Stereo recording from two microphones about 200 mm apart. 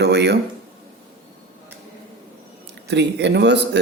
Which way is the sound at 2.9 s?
60° right (ahead or behind).